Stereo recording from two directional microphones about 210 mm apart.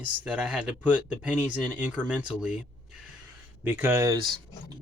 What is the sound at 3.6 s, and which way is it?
Speech, 10° right (ahead or behind).